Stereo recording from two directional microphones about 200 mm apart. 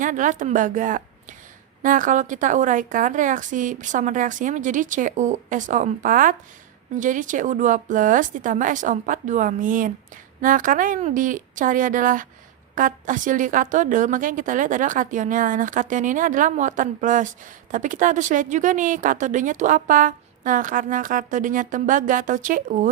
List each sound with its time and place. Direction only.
0.0 s a woman's voice: 40° right (ahead or behind)